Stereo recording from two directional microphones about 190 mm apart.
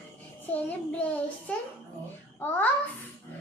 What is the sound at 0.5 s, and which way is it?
A child's voice, 10° left (ahead or behind).